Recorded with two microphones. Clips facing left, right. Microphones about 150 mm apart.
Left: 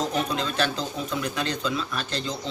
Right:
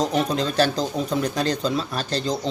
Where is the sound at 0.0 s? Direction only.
35° right (ahead or behind).